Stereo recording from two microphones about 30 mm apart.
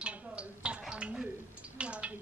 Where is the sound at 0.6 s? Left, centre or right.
Right.